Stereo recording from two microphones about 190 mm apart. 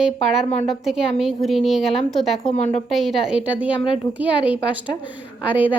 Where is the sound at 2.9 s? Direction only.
Centre (ahead or behind).